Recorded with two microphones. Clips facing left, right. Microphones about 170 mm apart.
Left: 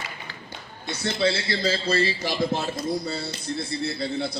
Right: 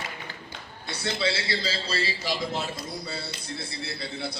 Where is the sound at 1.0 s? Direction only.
55° left (ahead or behind).